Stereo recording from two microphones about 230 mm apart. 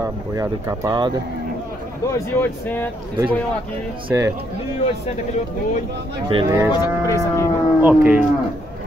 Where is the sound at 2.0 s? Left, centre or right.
Centre.